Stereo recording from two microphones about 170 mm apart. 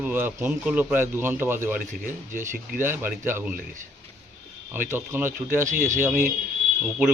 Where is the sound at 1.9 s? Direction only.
50° right (ahead or behind).